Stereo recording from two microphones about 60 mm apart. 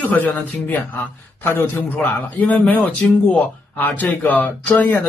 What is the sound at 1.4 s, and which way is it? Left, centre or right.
Speech, left.